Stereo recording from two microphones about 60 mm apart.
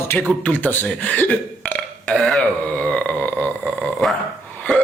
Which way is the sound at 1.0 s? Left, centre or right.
Left.